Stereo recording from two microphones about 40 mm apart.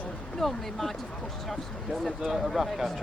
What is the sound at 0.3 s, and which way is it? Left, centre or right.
Speech, centre.